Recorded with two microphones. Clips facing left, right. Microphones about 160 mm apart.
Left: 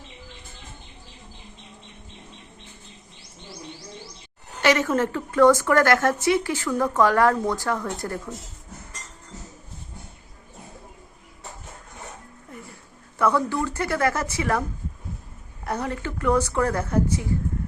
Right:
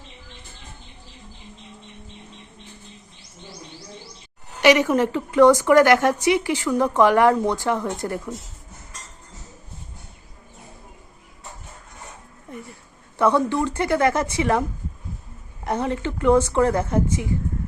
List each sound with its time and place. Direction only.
4.6 s a woman's voice: 15° right (ahead or behind)
13.1 s a woman's voice: 25° right (ahead or behind)
15.6 s a woman's voice: 25° right (ahead or behind)